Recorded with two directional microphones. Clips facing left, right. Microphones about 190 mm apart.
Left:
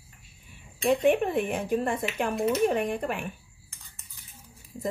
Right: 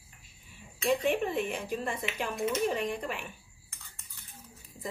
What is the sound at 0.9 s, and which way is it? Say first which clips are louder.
Speech: left 5 dB; 55° left (ahead or behind).